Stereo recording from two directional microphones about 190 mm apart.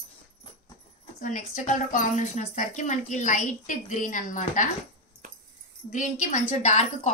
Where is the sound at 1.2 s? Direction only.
40° left (ahead or behind).